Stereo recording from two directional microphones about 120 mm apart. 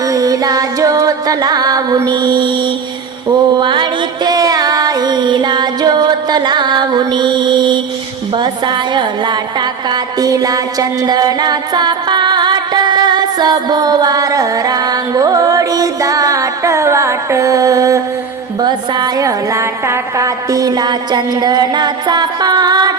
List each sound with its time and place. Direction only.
0.0 s music: 30° right (ahead or behind)
8.4 s a woman's voice: 40° right (ahead or behind)